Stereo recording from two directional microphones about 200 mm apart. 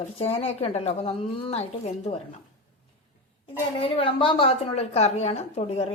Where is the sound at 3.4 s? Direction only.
25° left (ahead or behind).